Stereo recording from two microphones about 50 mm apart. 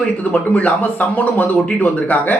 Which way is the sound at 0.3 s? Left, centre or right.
Left.